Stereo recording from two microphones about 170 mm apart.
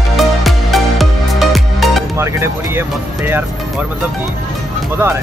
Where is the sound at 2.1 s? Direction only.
15° right (ahead or behind).